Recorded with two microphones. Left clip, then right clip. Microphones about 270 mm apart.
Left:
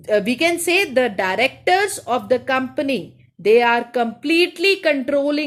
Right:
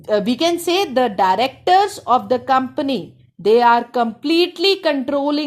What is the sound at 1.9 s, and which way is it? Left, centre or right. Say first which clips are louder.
Speech: right 3 dB; centre.